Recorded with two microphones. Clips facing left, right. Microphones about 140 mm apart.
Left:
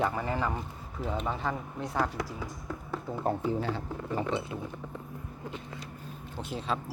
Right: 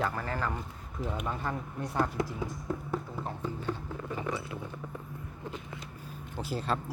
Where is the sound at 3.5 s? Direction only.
90° left.